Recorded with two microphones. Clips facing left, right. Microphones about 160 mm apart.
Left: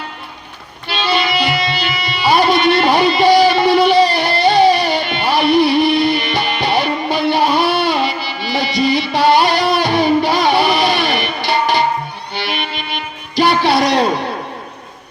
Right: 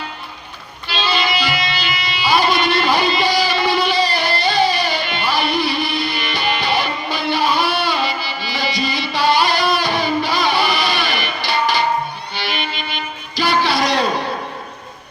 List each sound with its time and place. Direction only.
0.9 s music: 60° left (ahead or behind)